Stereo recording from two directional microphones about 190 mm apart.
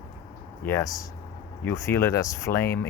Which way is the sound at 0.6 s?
15° left (ahead or behind).